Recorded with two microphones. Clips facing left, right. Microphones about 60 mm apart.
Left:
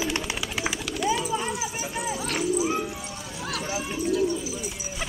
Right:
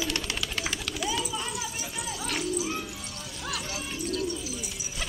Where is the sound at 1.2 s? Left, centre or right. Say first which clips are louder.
Left 5 dB; left.